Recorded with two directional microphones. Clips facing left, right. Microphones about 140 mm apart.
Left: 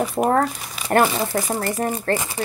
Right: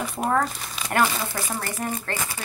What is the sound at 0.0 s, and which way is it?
Speech, 40° left (ahead or behind).